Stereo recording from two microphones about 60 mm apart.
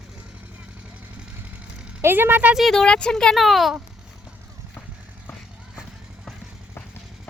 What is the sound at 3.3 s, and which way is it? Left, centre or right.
Speech, centre.